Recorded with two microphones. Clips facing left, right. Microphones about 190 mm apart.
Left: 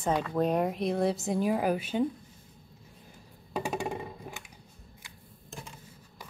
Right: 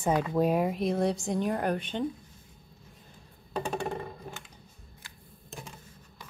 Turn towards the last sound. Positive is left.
turn(degrees=15)  # may be behind; listen again after turning